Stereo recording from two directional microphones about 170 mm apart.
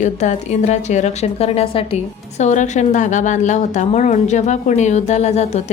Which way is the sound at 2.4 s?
45° left (ahead or behind).